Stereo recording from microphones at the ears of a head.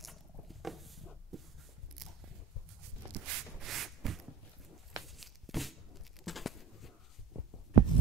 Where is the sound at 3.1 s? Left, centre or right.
Right.